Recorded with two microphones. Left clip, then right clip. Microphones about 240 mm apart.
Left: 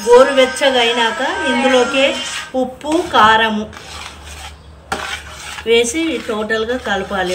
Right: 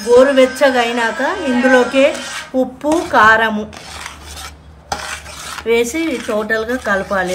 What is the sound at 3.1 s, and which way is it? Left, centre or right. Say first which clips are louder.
Speech: even; centre.